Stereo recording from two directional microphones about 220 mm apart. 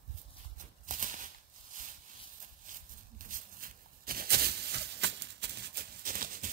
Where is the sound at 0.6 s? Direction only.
35° right (ahead or behind).